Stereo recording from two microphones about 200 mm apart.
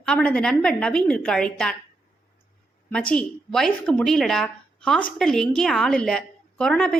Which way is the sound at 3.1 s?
5° left (ahead or behind).